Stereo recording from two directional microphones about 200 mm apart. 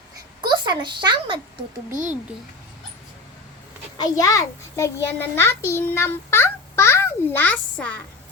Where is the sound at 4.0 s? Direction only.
15° left (ahead or behind).